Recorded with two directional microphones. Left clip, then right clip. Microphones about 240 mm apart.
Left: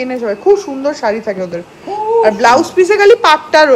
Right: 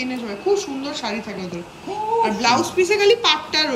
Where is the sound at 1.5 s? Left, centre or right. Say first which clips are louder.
Left 8 dB; centre.